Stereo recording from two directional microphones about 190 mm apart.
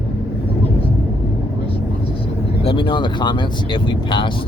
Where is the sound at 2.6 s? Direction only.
25° left (ahead or behind).